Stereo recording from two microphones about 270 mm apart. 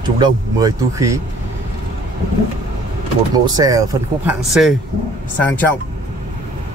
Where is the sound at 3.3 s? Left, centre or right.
Centre.